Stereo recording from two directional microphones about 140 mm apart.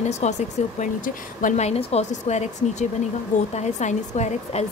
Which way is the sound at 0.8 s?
65° left (ahead or behind).